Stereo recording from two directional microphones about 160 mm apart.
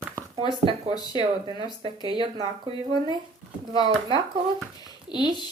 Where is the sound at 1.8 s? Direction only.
30° right (ahead or behind).